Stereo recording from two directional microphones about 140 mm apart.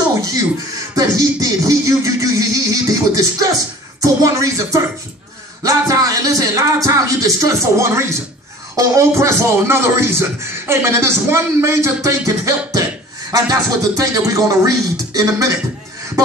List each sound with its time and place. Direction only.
0.9 s speech: 25° right (ahead or behind)
5.6 s speech: 25° right (ahead or behind)